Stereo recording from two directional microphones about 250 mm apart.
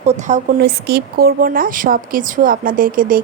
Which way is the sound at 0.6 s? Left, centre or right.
Right.